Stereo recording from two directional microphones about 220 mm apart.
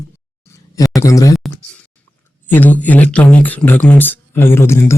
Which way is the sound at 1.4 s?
5° left (ahead or behind).